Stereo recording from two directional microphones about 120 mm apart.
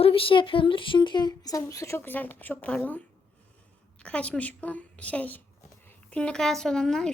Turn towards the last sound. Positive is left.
turn(degrees=5)  # may be behind; listen again after turning